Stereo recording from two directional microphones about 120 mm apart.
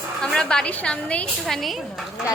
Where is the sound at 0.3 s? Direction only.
5° left (ahead or behind).